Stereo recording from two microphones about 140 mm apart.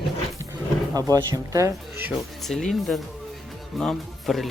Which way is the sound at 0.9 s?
25° right (ahead or behind).